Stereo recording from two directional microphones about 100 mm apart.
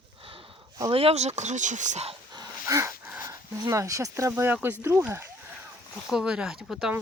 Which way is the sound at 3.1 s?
35° right (ahead or behind).